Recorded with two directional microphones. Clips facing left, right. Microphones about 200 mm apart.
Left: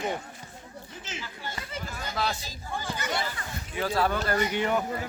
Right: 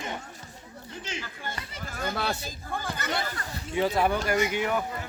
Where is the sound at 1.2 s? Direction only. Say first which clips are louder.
Even; 50° right (ahead or behind).